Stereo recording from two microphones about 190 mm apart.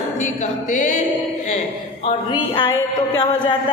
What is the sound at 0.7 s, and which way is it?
Music, 40° left (ahead or behind).